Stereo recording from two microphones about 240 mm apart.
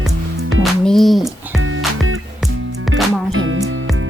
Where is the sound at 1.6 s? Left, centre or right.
Right.